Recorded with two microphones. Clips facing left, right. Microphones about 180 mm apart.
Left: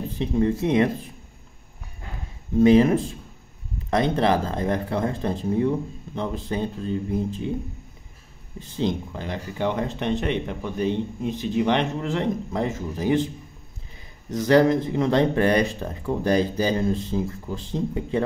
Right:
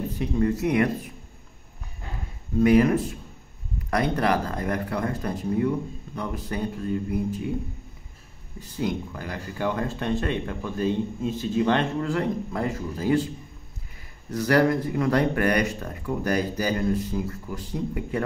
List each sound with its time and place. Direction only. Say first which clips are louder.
0.2 s speech: left 2 dB; 25° left (ahead or behind)
2.6 s speech: left 2 dB; 25° left (ahead or behind)
8.5 s speech: left 2 dB; 25° left (ahead or behind)
14.3 s speech: left 3 dB; 20° left (ahead or behind)